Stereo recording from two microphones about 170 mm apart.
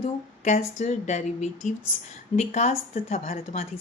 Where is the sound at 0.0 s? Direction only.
40° left (ahead or behind).